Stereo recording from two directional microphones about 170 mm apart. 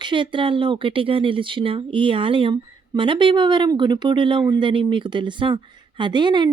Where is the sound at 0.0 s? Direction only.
30° right (ahead or behind).